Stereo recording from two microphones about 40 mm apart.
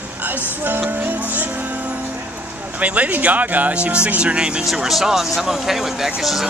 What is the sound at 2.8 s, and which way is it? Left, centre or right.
Speech, right.